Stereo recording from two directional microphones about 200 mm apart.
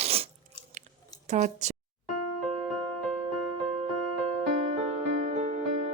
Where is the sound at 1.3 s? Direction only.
35° right (ahead or behind).